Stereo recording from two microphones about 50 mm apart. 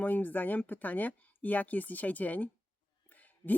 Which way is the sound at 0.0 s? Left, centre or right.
Left.